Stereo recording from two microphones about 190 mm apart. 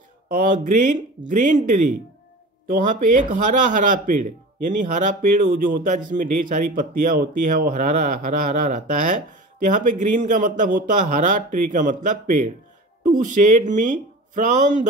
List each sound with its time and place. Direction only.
0.4 s a man's voice: 45° right (ahead or behind)